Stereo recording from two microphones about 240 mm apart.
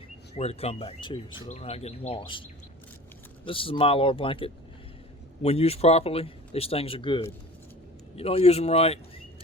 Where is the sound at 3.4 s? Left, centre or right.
Left.